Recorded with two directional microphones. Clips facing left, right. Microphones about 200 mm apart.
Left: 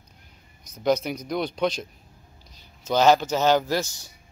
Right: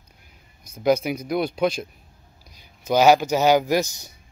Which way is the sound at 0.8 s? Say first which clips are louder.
Right 3 dB; 10° right (ahead or behind).